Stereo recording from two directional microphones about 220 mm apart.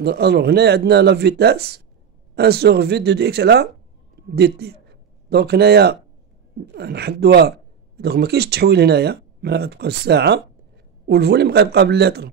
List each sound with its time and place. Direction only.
0.0 s speech: 50° right (ahead or behind)